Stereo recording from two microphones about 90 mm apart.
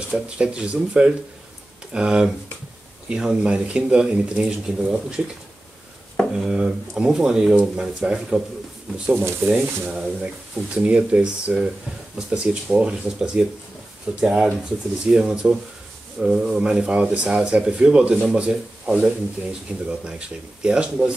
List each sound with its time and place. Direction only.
0.1 s speech: 10° right (ahead or behind)
6.3 s speech: 5° right (ahead or behind)